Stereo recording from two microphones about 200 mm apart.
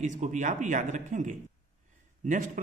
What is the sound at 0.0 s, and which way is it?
Speech, 40° right (ahead or behind).